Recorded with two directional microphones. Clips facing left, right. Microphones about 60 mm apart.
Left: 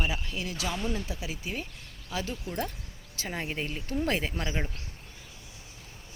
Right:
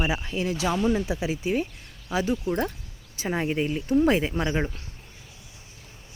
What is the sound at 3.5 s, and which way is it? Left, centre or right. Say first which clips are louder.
Speech: right 9 dB; centre.